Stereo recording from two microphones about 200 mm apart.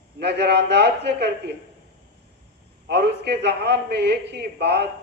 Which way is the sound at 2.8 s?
55° right (ahead or behind).